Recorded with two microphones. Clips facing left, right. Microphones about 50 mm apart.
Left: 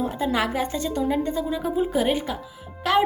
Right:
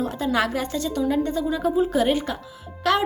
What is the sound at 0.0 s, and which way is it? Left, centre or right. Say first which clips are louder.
A woman's voice: right 1 dB; centre.